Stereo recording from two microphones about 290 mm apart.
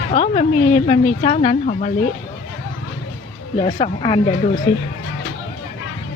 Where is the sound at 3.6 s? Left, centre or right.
Centre.